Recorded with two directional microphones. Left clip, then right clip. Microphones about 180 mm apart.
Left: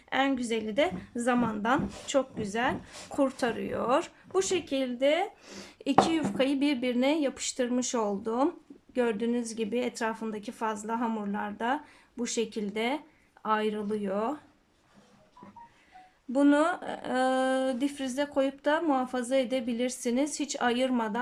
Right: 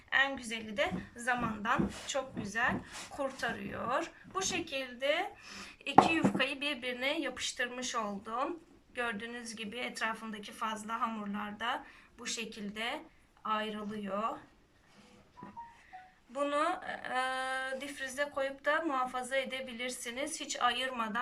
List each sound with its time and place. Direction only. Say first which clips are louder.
0.1 s a woman's voice: left 3 dB; 45° left (ahead or behind)
16.3 s speech: left 8 dB; 45° left (ahead or behind)